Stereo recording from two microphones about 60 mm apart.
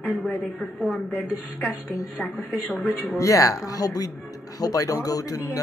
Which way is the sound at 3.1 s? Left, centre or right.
Left.